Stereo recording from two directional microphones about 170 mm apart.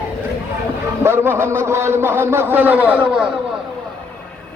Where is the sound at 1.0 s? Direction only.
15° right (ahead or behind).